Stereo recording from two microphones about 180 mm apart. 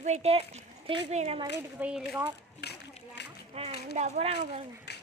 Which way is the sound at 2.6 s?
70° left (ahead or behind).